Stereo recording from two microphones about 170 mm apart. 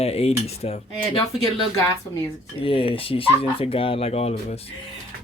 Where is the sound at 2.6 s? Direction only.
30° left (ahead or behind).